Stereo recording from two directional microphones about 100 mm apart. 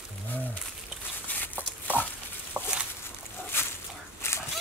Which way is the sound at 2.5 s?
15° right (ahead or behind).